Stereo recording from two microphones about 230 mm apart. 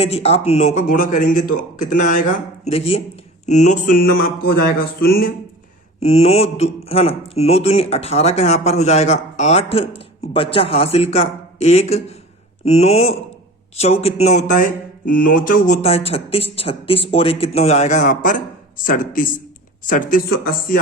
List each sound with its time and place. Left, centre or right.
0.0 s speech: left
6.0 s speech: left